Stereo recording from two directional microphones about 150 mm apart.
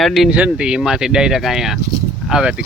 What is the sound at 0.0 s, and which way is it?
Speech, centre (ahead or behind).